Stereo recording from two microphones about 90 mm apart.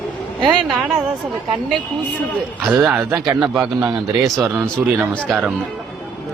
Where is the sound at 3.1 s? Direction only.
45° right (ahead or behind).